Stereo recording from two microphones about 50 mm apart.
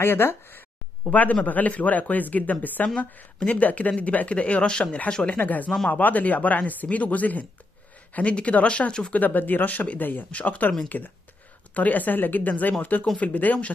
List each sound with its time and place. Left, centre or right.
0.0 s speech: left
1.0 s speech: left
5.4 s speech: left; by 9.1 s centre
9.1 s speech: left